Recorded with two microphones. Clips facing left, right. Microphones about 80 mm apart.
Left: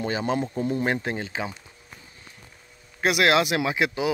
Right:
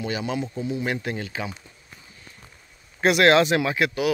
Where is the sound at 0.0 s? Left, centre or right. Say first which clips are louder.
Left 2 dB; left.